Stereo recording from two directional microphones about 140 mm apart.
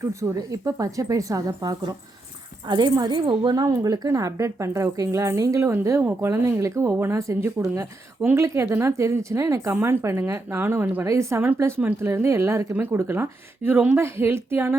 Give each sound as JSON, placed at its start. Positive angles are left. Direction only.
{"t": 0.0, "sound": "a woman's voice", "side_deg": -20}